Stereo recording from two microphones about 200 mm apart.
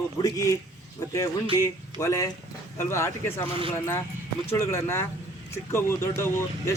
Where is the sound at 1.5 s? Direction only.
15° left (ahead or behind).